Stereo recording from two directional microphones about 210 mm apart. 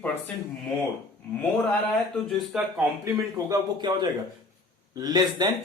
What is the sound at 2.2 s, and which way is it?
Speech, centre (ahead or behind).